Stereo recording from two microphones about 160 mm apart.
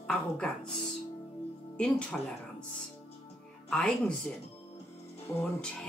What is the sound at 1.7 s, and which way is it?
Speech, 5° left (ahead or behind).